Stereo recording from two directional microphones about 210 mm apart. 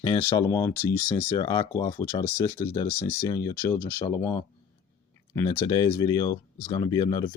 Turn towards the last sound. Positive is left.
turn(degrees=20)  # may be behind; listen again after turning